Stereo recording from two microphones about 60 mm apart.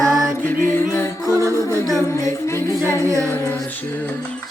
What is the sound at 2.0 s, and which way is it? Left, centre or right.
A capella, left.